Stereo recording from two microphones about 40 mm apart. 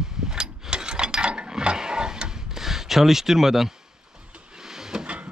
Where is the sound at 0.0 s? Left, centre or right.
Centre.